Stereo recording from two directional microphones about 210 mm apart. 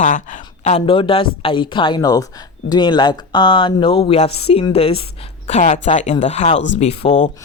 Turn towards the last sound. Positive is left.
turn(degrees=35)  # may be behind; listen again after turning